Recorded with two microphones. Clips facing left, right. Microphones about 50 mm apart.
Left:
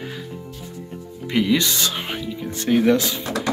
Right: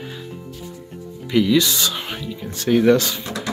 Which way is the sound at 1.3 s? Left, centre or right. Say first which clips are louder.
Right 3 dB; left.